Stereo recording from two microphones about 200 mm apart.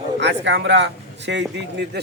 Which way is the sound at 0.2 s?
60° right (ahead or behind).